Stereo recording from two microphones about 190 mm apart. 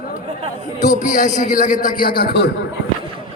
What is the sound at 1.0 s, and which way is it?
A man's voice, 40° left (ahead or behind).